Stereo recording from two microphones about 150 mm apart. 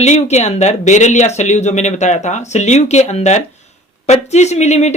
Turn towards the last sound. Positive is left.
turn(degrees=50)  # may be behind; listen again after turning